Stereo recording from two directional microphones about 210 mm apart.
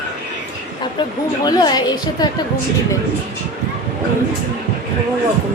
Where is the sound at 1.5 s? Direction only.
20° left (ahead or behind).